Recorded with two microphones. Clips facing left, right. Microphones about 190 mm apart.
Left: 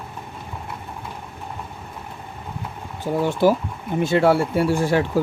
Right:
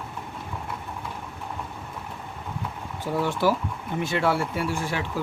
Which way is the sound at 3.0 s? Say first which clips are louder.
Left 5 dB; 20° left (ahead or behind).